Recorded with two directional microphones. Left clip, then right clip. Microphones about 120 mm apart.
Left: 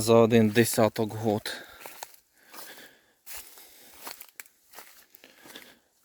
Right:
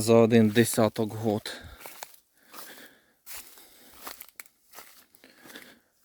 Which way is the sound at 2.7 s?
40° right (ahead or behind).